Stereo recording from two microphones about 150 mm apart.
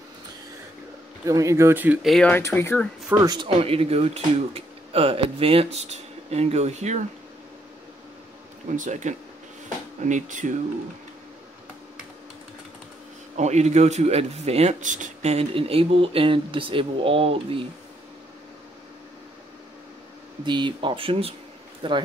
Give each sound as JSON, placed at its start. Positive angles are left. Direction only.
{"t": 1.2, "sound": "speech", "side_deg": -20}
{"t": 2.0, "sound": "speech", "side_deg": 5}
{"t": 2.3, "sound": "speech", "side_deg": 15}
{"t": 3.1, "sound": "speech", "side_deg": -10}
{"t": 3.4, "sound": "speech", "side_deg": -40}
{"t": 8.7, "sound": "speech", "side_deg": -55}
{"t": 13.4, "sound": "speech", "side_deg": -50}
{"t": 20.4, "sound": "speech", "side_deg": -30}